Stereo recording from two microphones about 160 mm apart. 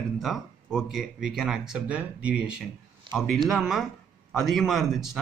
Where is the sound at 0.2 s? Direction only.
Centre (ahead or behind).